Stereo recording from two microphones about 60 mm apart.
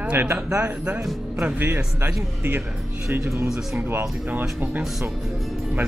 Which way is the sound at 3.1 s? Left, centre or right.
Right.